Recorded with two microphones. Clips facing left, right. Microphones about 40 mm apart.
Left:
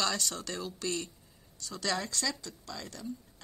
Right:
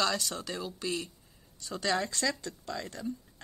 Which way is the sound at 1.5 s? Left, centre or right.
Right.